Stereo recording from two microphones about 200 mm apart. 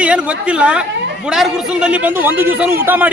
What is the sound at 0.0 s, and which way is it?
A woman's voice, 5° right (ahead or behind).